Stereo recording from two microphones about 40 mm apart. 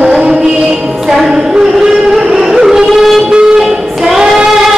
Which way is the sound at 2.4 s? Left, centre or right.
Centre.